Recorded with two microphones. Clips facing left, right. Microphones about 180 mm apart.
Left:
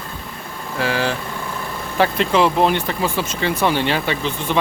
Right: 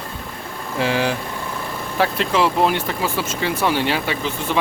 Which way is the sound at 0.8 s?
20° right (ahead or behind).